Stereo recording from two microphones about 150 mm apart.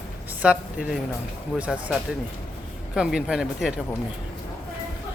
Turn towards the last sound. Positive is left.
turn(degrees=-5)  # may be behind; listen again after turning